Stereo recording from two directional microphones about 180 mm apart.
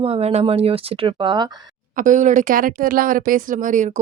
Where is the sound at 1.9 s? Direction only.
45° right (ahead or behind).